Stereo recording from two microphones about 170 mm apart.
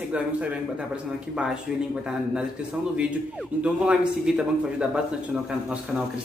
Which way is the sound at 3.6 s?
5° right (ahead or behind).